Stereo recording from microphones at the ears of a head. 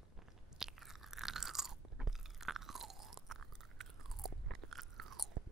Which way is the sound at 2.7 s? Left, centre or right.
Right.